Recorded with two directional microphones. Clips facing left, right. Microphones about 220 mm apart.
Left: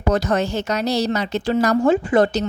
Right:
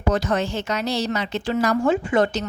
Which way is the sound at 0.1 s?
40° left (ahead or behind).